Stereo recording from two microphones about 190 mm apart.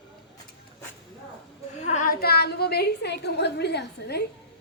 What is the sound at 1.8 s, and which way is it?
A woman's voice, 40° left (ahead or behind).